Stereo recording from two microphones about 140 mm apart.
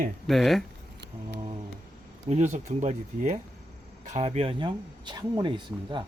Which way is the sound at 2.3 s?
55° right (ahead or behind).